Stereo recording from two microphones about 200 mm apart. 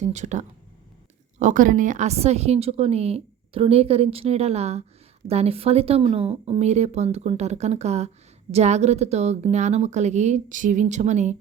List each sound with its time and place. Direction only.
0.0 s speech: 35° right (ahead or behind)